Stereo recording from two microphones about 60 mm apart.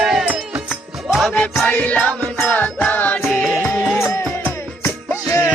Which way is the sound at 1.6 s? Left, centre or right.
Left.